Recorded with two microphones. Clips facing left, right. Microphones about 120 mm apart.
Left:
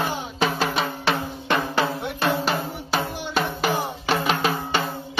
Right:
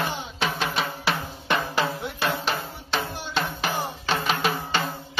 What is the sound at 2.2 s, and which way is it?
Drum, 5° left (ahead or behind).